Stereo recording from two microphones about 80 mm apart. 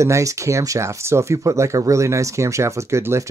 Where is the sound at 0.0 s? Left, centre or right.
Right.